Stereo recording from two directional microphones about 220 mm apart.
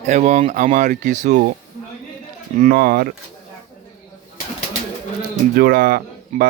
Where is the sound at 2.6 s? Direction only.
45° right (ahead or behind).